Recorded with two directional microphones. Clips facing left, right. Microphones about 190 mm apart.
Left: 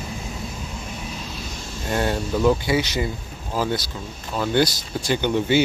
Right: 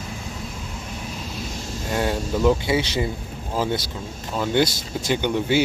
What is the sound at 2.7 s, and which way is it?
Speech, 30° right (ahead or behind).